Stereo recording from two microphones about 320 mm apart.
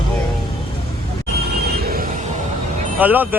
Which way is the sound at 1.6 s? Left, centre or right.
Right.